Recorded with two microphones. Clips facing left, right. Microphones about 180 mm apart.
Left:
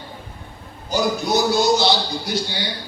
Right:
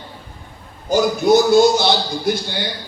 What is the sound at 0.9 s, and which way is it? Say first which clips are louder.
A man's voice: right 7 dB; 50° right (ahead or behind).